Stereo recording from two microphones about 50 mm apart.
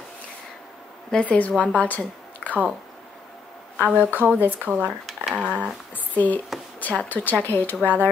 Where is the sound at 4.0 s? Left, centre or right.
Right.